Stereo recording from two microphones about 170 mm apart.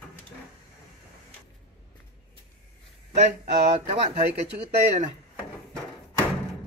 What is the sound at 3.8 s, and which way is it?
Speech, 40° right (ahead or behind).